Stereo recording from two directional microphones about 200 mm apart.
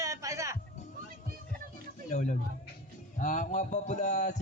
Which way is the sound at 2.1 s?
40° left (ahead or behind).